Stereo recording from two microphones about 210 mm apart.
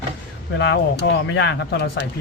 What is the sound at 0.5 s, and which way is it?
Speech, 55° left (ahead or behind).